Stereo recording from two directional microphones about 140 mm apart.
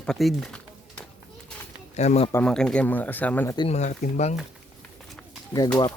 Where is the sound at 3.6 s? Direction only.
55° left (ahead or behind).